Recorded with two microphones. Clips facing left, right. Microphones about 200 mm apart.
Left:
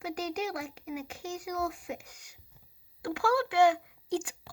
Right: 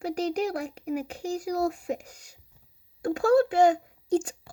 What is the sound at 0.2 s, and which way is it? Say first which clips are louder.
Speech: right 7 dB; 35° right (ahead or behind).